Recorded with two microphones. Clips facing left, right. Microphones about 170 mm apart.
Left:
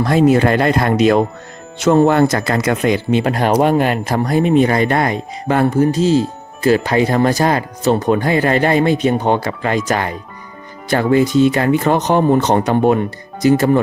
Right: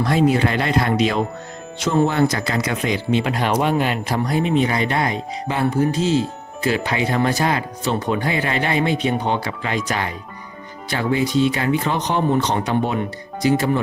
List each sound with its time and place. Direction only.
0.0 s speech: 45° left (ahead or behind)